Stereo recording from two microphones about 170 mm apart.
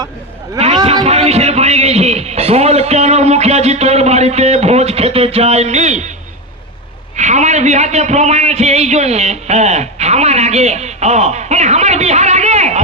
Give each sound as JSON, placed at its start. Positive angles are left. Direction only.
{"t": 1.0, "sound": "a man's voice", "side_deg": -40}
{"t": 7.2, "sound": "a man's voice", "side_deg": -45}